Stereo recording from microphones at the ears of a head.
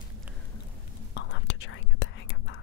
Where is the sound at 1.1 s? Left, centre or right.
Left.